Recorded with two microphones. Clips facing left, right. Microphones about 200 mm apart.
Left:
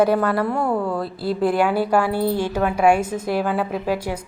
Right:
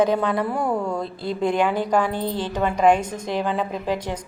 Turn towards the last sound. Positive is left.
turn(degrees=10)  # may be behind; listen again after turning